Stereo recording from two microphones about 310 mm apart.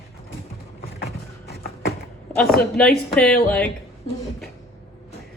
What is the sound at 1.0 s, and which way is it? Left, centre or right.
Vehicle, left.